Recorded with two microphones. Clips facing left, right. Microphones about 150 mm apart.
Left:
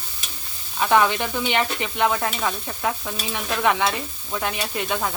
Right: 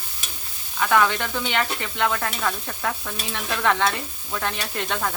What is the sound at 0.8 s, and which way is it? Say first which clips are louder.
Stir: left 2 dB; 20° left (ahead or behind).